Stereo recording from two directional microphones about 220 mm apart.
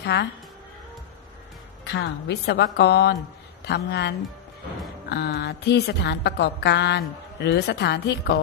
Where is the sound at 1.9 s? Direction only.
50° left (ahead or behind).